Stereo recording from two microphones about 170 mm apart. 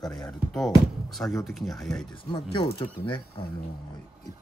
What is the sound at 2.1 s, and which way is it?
Speech, 30° left (ahead or behind).